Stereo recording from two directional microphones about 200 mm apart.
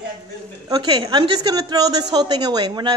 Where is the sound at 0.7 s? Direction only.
20° right (ahead or behind).